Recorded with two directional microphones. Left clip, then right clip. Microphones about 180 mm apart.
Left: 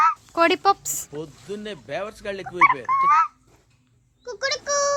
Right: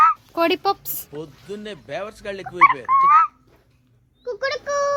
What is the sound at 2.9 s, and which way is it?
Speech, 45° right (ahead or behind).